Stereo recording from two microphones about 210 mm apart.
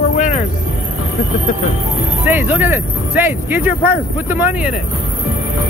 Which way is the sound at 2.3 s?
10° right (ahead or behind).